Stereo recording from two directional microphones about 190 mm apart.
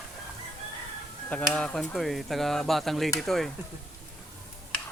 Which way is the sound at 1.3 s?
5° left (ahead or behind).